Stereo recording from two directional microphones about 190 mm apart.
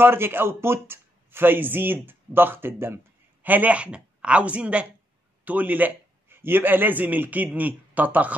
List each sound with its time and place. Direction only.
0.0 s a man's voice: 10° right (ahead or behind)